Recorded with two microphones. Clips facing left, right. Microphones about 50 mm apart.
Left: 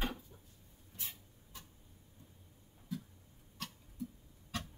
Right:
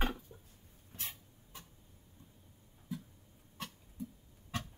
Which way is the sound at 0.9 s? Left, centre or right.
Right.